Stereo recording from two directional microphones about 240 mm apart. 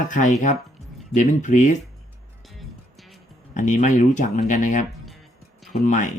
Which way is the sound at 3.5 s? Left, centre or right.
Left.